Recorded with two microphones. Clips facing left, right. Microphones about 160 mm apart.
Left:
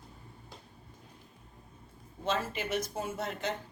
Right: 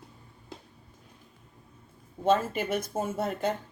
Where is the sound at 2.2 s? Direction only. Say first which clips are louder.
Right 8 dB; 50° right (ahead or behind).